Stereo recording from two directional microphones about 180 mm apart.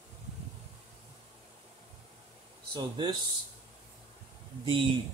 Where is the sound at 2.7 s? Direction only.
25° right (ahead or behind).